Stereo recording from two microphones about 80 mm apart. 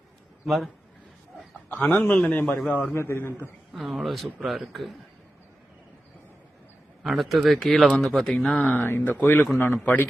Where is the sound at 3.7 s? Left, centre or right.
Centre.